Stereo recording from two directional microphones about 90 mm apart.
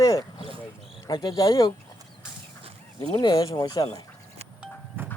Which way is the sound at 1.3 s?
45° left (ahead or behind).